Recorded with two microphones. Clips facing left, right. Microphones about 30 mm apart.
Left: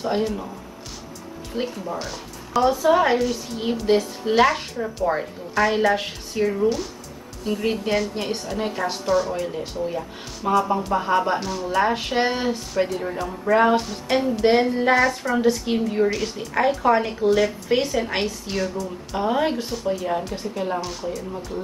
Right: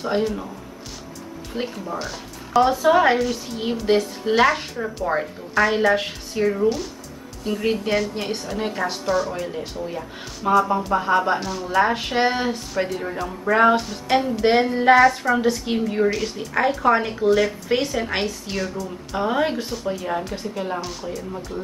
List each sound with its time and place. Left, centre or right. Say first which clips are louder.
0.0 s a woman's voice: right 1 dB; centre
1.5 s speech: left 1 dB; centre
2.7 s a woman's voice: left 1 dB; centre